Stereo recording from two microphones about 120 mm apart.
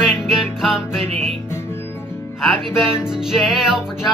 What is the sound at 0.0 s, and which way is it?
Music, 5° right (ahead or behind).